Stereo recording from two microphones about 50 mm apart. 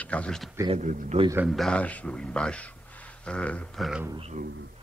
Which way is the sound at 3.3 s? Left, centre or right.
Left.